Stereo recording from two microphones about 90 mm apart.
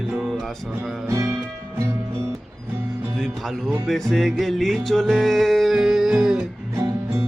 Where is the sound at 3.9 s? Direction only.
5° left (ahead or behind).